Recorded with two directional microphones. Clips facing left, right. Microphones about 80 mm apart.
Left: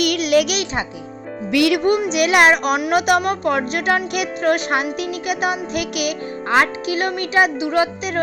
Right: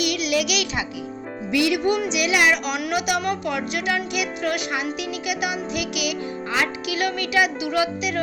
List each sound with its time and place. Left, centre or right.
0.0 s music: left
1.5 s speech: left